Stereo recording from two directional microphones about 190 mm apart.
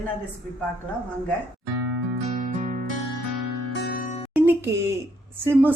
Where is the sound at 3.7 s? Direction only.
55° left (ahead or behind).